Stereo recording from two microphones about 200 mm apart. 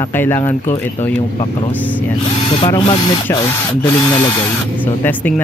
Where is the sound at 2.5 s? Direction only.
25° left (ahead or behind).